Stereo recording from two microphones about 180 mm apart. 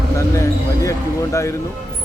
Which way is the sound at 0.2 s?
15° left (ahead or behind).